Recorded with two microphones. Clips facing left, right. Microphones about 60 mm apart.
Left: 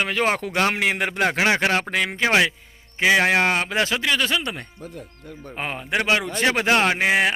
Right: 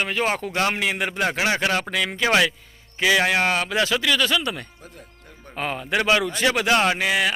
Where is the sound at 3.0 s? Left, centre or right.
Left.